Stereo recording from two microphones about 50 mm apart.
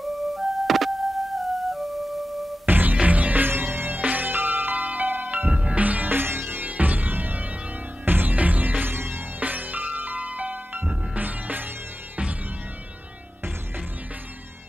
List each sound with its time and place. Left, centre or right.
0.0 s music: centre
2.6 s music: right
3.4 s music: right
5.5 s music: right
9.4 s music: right